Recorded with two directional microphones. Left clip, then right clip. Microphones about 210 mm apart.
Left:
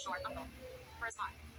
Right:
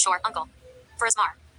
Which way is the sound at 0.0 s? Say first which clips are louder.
Right 17 dB; 50° right (ahead or behind).